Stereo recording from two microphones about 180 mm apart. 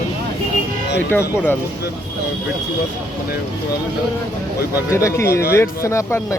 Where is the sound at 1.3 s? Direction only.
10° left (ahead or behind).